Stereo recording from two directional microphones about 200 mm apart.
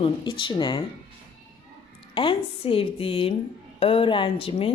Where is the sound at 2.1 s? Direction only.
25° left (ahead or behind).